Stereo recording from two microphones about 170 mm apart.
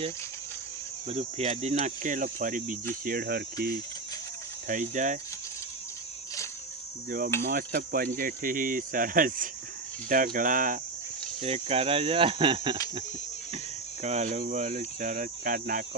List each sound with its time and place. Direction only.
1.0 s cricket: 35° right (ahead or behind)
2.9 s speech: 55° right (ahead or behind)
4.7 s cricket: 45° right (ahead or behind)
7.4 s speech: 60° right (ahead or behind)
10.1 s cricket: 55° right (ahead or behind)
11.4 s speech: 35° right (ahead or behind)
14.0 s cricket: 40° right (ahead or behind)